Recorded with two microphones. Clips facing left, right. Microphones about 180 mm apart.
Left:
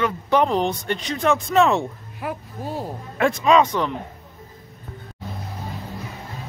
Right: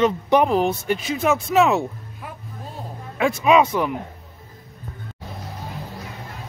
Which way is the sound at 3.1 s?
5° right (ahead or behind).